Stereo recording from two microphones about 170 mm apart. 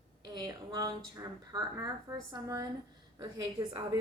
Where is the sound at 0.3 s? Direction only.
20° right (ahead or behind).